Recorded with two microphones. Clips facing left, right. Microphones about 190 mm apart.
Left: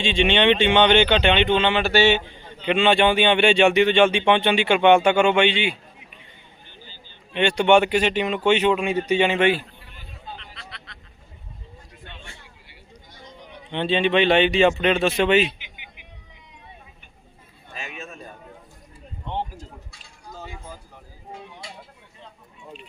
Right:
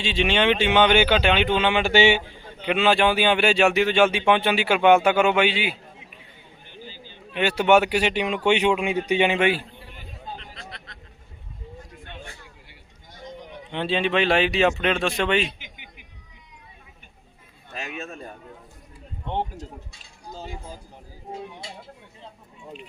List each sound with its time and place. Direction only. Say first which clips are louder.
0.0 s speech: left 3 dB; 5° right (ahead or behind)
6.9 s speech: left 3 dB; 5° right (ahead or behind)
10.2 s a sound: right 2 dB; 45° right (ahead or behind)
13.7 s speech: left 3 dB; 5° right (ahead or behind)
15.4 s a sound: left 2 dB; 45° right (ahead or behind)
17.7 s a man's voice: right 3 dB; 65° right (ahead or behind)